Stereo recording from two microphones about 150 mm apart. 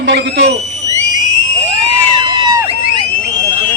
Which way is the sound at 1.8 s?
30° right (ahead or behind).